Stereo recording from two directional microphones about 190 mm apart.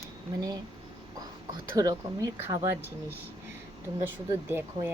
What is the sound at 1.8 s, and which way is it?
Speech, 20° right (ahead or behind).